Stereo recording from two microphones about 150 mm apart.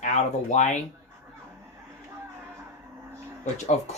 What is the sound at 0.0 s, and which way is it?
Speech, 55° left (ahead or behind).